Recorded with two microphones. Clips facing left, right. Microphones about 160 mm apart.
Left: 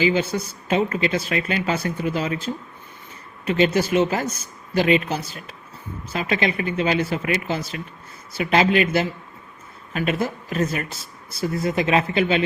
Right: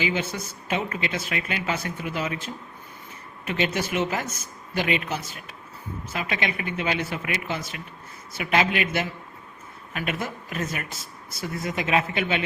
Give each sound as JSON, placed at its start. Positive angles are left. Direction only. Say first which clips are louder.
{"t": 0.0, "sound": "speech", "louder": "left 7 dB", "side_deg": 35}